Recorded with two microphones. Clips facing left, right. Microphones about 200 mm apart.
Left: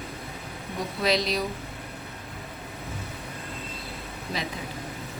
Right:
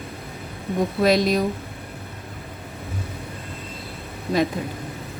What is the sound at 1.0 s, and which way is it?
Speech, 50° right (ahead or behind).